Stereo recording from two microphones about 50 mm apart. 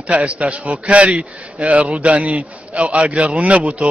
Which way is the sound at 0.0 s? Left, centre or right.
Right.